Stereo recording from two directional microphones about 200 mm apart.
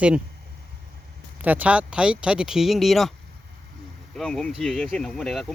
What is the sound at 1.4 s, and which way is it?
Speech, 10° right (ahead or behind).